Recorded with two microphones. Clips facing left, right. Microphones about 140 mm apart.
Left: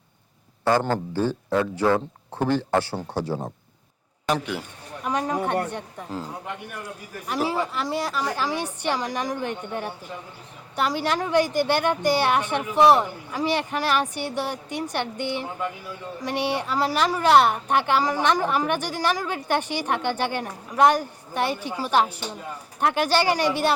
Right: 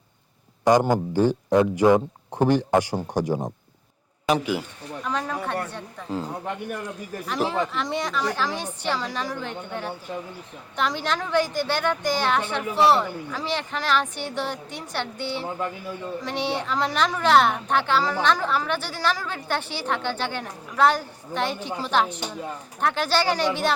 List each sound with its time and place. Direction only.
0.6 s speech: 15° right (ahead or behind)
4.3 s a man's voice: 5° right (ahead or behind)
5.0 s a woman's voice: 15° left (ahead or behind)
7.3 s a woman's voice: 5° left (ahead or behind)